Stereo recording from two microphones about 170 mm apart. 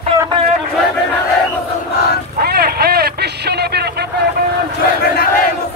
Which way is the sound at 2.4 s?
65° right (ahead or behind).